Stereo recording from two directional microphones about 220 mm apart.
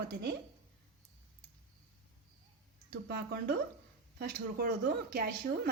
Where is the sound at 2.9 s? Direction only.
45° right (ahead or behind).